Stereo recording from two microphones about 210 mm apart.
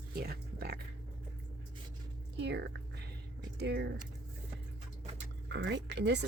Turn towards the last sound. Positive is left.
turn(degrees=-55)  # may be behind; listen again after turning